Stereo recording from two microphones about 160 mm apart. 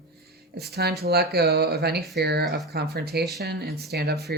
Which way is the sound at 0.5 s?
90° right.